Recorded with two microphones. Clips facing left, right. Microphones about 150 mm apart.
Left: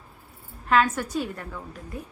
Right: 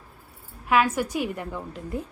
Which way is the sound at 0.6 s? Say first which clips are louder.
Even; 10° right (ahead or behind).